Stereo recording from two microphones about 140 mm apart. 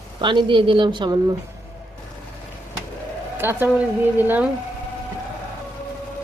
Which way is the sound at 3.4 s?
15° right (ahead or behind).